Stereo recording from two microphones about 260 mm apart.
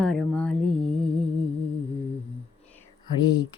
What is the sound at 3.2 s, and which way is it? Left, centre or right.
Speech, centre.